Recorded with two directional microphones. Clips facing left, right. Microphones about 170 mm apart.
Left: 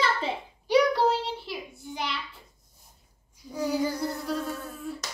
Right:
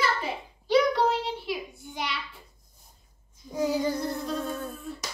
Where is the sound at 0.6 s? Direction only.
15° left (ahead or behind).